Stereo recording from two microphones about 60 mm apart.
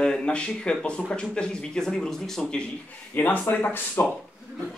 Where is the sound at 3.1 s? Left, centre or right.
Left.